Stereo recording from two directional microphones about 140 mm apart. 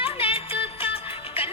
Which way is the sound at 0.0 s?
40° left (ahead or behind).